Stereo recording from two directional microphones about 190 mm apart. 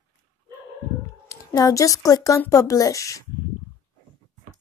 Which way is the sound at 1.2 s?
20° left (ahead or behind).